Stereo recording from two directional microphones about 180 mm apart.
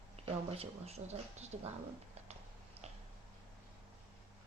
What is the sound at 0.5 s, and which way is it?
Speech, 35° right (ahead or behind).